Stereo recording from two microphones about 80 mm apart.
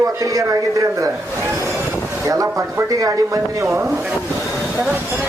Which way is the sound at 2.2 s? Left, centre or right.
Right.